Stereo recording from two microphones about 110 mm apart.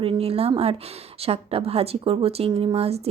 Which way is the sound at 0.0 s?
60° right (ahead or behind).